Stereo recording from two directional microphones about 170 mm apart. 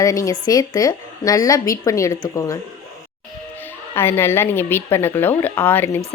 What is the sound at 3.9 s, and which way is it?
A woman's voice, 15° left (ahead or behind).